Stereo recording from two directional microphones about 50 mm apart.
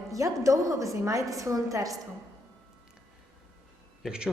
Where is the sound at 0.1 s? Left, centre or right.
Right.